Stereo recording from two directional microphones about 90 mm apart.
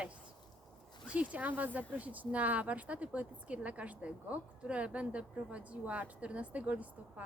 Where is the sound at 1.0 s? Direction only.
15° right (ahead or behind).